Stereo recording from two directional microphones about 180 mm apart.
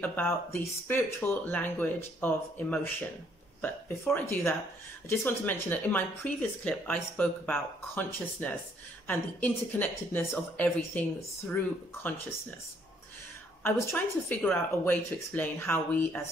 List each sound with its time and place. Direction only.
0.0 s speech: 10° left (ahead or behind)
13.6 s speech: 10° left (ahead or behind)